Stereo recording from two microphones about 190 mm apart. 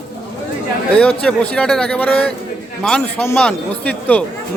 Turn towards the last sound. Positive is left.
turn(degrees=5)  # may be behind; listen again after turning